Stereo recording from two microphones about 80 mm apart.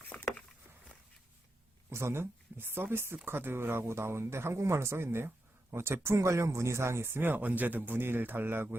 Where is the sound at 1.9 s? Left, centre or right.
Right.